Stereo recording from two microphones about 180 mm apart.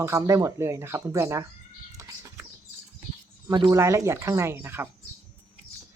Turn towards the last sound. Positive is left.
turn(degrees=-10)  # may be behind; listen again after turning